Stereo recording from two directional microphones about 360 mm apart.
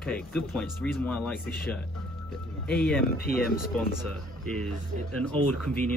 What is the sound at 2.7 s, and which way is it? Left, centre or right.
Speech, centre.